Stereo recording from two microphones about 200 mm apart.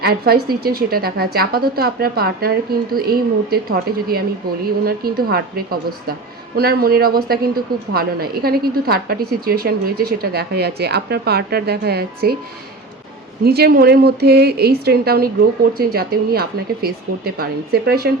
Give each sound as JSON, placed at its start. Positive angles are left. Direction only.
{"t": 0.0, "sound": "a woman's voice", "side_deg": -50}
{"t": 13.4, "sound": "a woman's voice", "side_deg": -50}